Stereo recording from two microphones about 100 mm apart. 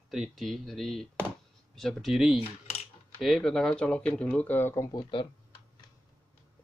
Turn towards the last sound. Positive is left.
turn(degrees=45)  # may be behind; listen again after turning